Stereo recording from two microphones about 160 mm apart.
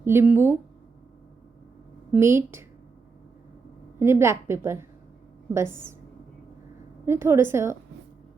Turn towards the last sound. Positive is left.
turn(degrees=-15)  # may be behind; listen again after turning